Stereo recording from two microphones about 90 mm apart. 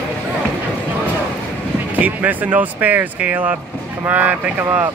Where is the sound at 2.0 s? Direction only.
20° right (ahead or behind).